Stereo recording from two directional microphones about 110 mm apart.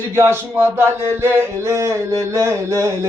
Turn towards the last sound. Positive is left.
turn(degrees=-25)  # may be behind; listen again after turning